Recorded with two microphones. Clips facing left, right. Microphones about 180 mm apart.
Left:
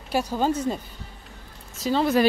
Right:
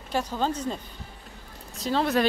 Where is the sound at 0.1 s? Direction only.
10° left (ahead or behind).